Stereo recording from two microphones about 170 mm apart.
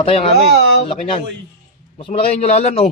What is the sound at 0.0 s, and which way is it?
Speech, 35° left (ahead or behind).